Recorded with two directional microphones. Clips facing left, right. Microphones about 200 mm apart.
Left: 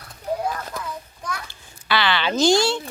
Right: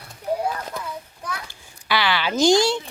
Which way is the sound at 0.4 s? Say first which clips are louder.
Even; 10° right (ahead or behind).